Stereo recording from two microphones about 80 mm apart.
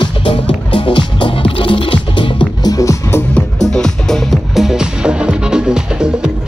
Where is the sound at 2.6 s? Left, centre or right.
Left.